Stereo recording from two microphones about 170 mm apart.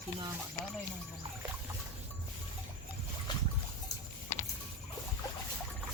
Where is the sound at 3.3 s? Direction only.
25° left (ahead or behind).